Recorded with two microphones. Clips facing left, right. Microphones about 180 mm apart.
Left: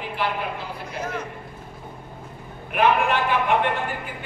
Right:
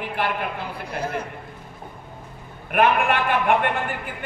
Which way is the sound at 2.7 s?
55° right (ahead or behind).